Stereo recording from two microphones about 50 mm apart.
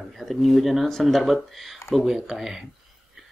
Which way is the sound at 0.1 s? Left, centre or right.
Centre.